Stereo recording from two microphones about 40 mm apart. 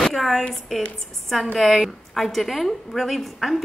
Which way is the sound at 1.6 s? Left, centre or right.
Centre.